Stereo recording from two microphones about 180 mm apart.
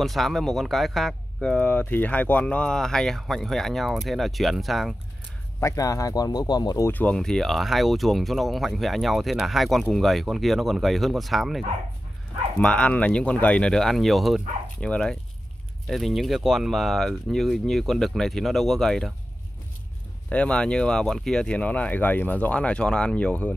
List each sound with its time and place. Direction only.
0.0 s speech: centre (ahead or behind)
5.6 s speech: 20° left (ahead or behind)
6.9 s speech: 10° left (ahead or behind)
20.2 s speech: 5° left (ahead or behind)